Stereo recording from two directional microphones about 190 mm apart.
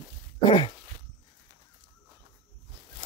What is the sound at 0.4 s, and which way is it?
Throat clearing, 25° left (ahead or behind).